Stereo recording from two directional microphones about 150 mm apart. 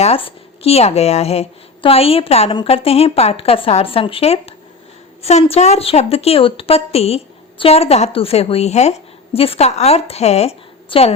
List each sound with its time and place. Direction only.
0.0 s a woman's voice: 40° left (ahead or behind)